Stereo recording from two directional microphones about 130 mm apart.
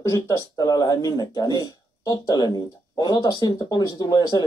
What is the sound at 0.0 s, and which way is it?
Speech, 25° left (ahead or behind).